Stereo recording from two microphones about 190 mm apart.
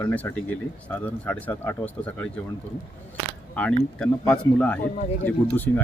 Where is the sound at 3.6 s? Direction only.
5° left (ahead or behind).